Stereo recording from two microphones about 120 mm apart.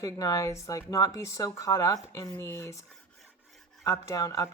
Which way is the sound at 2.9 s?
Centre (ahead or behind).